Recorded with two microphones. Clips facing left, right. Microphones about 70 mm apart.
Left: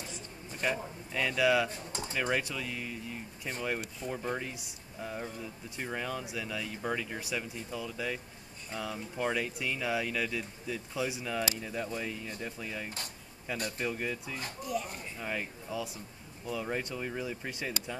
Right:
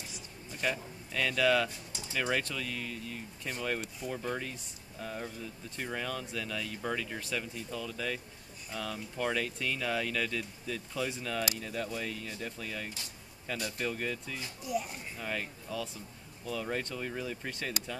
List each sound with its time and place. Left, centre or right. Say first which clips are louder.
0.6 s speech: left 1 dB; centre
1.7 s speech: left 6 dB; left
2.3 s speech: left 1 dB; centre
14.7 s speech: right 1 dB; centre
15.1 s speech: even; centre